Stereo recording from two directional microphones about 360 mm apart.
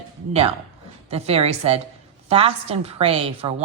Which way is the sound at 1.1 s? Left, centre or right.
Centre.